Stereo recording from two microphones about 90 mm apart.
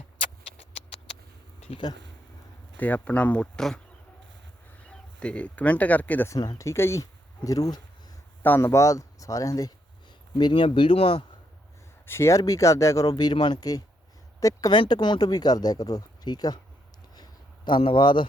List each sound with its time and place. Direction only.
2.7 s speech: 20° left (ahead or behind)
4.9 s speech: 15° left (ahead or behind)
6.4 s speech: 50° left (ahead or behind)
6.7 s speech: 30° left (ahead or behind)
8.4 s speech: 20° left (ahead or behind); by 9.7 s 40° left (ahead or behind)
10.3 s speech: 60° left (ahead or behind); by 11.2 s 90° left
12.0 s speech: 30° left (ahead or behind); by 13.3 s 45° left (ahead or behind)
13.3 s speech: 55° left (ahead or behind)
14.7 s speech: 55° left (ahead or behind)
17.7 s speech: 70° left (ahead or behind)